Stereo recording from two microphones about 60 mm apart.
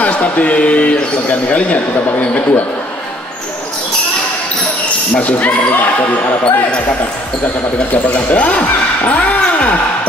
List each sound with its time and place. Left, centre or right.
0.0 s speech: left
5.1 s speech: left
6.4 s speech: centre